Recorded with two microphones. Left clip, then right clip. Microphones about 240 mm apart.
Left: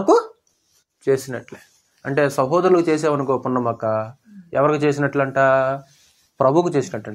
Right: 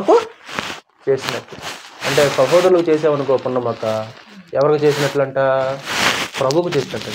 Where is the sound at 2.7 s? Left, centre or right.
Left.